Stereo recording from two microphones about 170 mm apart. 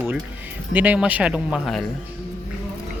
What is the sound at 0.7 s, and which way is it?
Speech, 10° right (ahead or behind).